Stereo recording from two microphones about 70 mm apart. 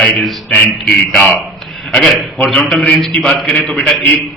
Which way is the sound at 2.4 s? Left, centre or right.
Centre.